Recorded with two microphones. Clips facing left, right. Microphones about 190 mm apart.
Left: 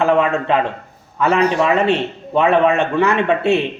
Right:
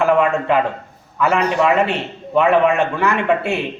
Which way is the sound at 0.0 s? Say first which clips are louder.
Even; 25° left (ahead or behind).